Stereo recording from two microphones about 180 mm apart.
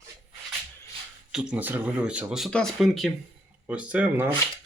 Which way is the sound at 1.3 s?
5° right (ahead or behind).